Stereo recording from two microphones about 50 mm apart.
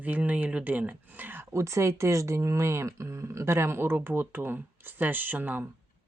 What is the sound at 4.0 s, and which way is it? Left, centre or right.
Speech, right.